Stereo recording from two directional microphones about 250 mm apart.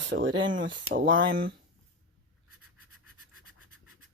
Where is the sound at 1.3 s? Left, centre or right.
Right.